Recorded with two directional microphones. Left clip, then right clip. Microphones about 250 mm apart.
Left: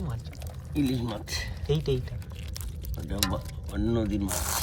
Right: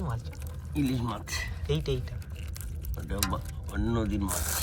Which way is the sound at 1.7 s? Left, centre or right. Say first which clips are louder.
Left 4 dB; centre.